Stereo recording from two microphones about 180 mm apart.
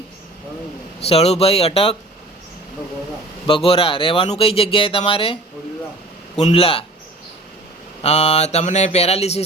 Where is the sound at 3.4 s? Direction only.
30° left (ahead or behind).